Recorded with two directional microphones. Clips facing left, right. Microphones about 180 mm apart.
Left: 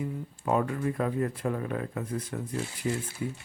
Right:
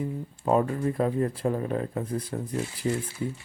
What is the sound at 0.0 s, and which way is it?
Speech, 30° right (ahead or behind).